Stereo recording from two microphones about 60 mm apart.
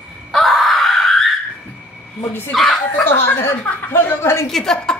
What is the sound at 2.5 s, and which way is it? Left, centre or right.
Speech, centre.